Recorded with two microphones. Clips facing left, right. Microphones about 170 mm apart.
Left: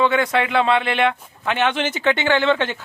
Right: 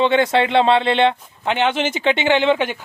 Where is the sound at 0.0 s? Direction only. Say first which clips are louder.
Right 3 dB; 25° right (ahead or behind).